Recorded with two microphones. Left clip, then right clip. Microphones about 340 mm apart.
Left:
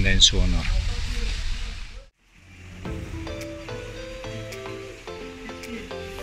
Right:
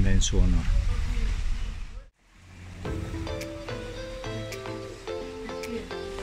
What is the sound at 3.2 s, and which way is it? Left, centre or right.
Music, centre.